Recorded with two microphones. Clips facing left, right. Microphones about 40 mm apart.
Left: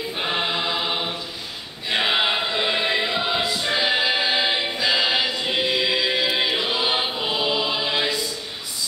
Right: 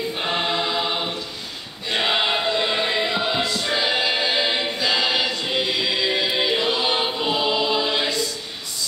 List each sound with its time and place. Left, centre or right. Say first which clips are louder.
0.1 s choir: left 2 dB; centre